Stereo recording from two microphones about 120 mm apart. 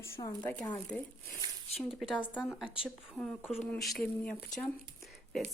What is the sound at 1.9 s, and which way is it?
Speech, 5° right (ahead or behind).